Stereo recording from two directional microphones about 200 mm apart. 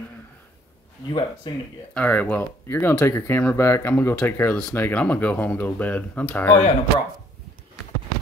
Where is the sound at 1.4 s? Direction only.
20° left (ahead or behind).